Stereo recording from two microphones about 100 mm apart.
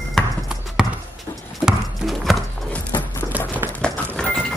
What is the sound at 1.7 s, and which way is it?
Horse, centre (ahead or behind).